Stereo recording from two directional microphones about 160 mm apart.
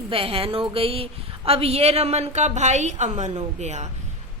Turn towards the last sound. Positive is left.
turn(degrees=-45)  # may be behind; listen again after turning